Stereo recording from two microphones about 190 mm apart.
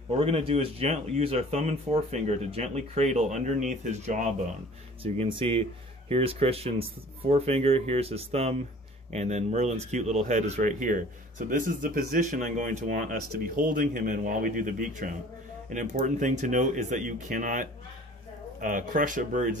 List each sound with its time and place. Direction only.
0.2 s speech: 30° right (ahead or behind)